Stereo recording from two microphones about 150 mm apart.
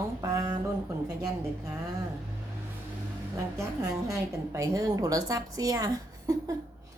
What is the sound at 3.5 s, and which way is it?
A woman's voice, 20° right (ahead or behind).